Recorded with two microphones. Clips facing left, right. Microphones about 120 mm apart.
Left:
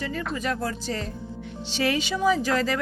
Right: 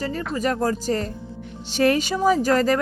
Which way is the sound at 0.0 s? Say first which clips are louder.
Right 4 dB; 40° right (ahead or behind).